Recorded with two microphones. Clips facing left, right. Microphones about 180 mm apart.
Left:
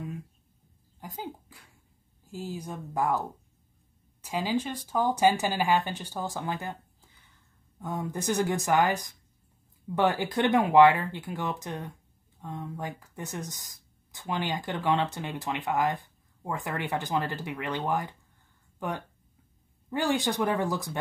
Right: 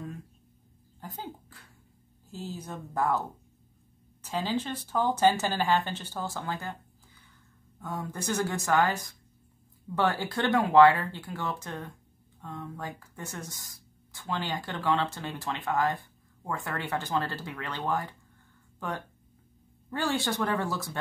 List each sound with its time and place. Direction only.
1.0 s speech: 10° left (ahead or behind)
7.8 s speech: 20° left (ahead or behind)